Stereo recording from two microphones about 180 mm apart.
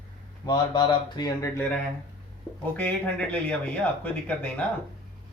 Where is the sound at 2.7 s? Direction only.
10° left (ahead or behind).